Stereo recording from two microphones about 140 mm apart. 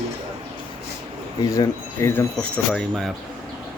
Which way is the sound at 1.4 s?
25° left (ahead or behind).